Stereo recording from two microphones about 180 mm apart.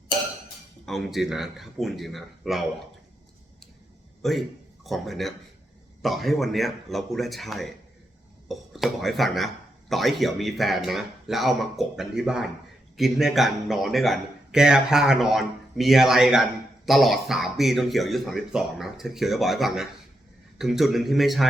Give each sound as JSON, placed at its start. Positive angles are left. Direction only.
{"t": 0.9, "sound": "speech", "side_deg": 0}
{"t": 4.2, "sound": "a man's voice", "side_deg": 0}